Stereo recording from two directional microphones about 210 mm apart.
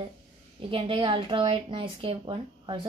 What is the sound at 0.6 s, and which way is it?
A woman's voice, 25° right (ahead or behind).